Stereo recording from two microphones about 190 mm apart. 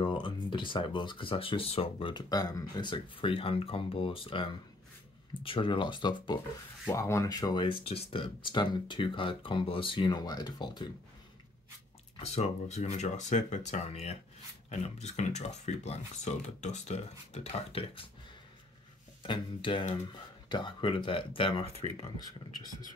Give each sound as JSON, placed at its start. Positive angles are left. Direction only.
{"t": 0.0, "sound": "speech", "side_deg": 25}
{"t": 12.2, "sound": "speech", "side_deg": 35}
{"t": 19.2, "sound": "speech", "side_deg": 25}